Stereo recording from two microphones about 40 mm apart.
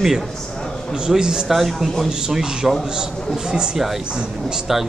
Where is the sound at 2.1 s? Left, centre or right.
Centre.